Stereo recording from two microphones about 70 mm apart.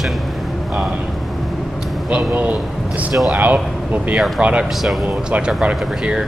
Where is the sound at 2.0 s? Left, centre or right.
Centre.